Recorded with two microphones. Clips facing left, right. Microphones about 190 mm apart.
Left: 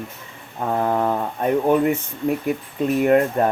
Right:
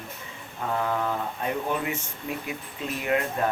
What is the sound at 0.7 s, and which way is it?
Speech, 45° left (ahead or behind).